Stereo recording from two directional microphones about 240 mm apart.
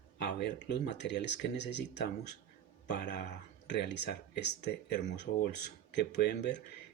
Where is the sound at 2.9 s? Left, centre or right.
Left.